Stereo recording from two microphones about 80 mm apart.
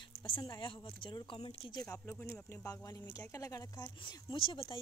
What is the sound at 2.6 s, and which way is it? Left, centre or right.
Speech, left.